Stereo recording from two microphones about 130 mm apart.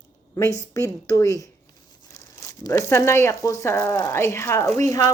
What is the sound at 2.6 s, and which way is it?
Speech, 20° left (ahead or behind).